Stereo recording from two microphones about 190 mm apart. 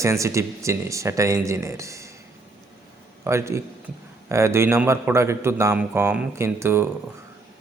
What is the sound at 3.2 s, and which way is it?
Speech, 15° right (ahead or behind).